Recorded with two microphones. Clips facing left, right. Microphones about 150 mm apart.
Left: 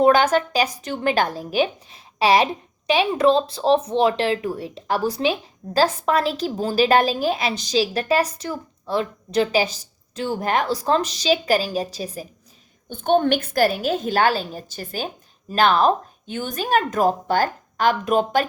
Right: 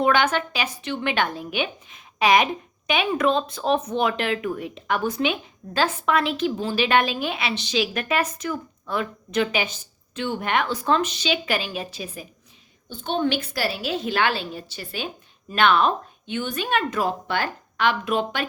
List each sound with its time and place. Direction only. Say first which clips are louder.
0.0 s a woman's voice: left 5 dB; 40° left (ahead or behind)
12.9 s a woman's voice: left 6 dB; 55° left (ahead or behind)